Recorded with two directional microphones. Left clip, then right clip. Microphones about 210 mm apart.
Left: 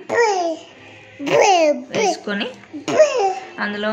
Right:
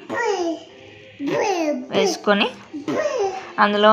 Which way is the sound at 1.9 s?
5° right (ahead or behind).